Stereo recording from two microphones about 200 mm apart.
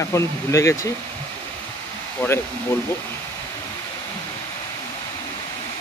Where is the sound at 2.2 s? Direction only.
10° left (ahead or behind).